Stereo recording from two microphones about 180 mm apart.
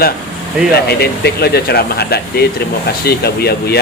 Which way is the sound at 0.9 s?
60° left (ahead or behind).